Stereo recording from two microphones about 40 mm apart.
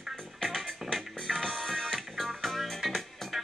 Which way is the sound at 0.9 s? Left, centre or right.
Centre.